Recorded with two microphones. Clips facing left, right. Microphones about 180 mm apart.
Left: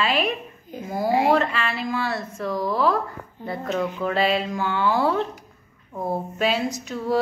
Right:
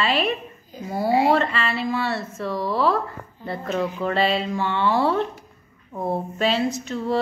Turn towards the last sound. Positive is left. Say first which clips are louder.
# even
turn(degrees=0)  # may be behind; listen again after turning